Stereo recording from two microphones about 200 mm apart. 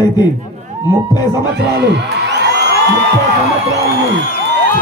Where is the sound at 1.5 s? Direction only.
55° right (ahead or behind).